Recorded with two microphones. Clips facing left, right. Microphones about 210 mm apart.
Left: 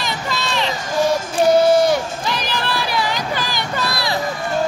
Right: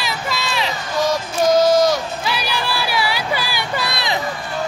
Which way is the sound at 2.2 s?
10° right (ahead or behind).